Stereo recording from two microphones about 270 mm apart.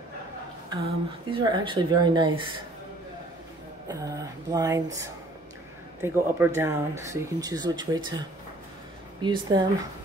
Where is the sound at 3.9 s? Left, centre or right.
Centre.